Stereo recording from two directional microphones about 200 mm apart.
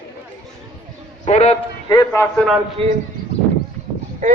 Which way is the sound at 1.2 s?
35° left (ahead or behind).